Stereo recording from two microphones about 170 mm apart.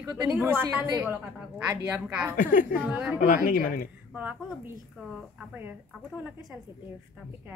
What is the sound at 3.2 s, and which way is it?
Speech, 55° left (ahead or behind).